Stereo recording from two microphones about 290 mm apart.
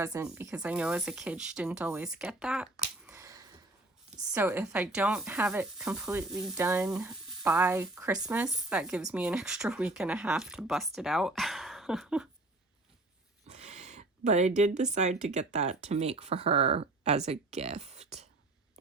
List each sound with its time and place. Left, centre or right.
0.0 s speech: centre
3.1 s a sound: centre
4.3 s speech: centre
13.5 s speech: right